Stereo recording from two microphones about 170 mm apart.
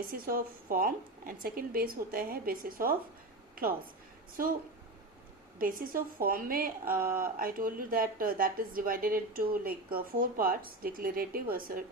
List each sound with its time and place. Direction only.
0.1 s speech: 55° right (ahead or behind)
3.5 s a sound: 55° right (ahead or behind)
5.5 s speech: 55° right (ahead or behind)